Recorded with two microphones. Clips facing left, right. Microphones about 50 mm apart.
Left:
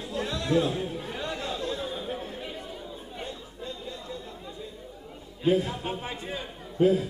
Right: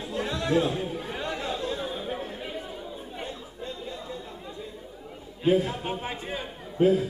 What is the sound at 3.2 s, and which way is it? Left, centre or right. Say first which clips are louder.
Chatter: even; centre.